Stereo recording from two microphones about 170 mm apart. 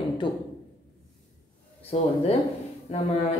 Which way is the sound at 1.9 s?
40° left (ahead or behind).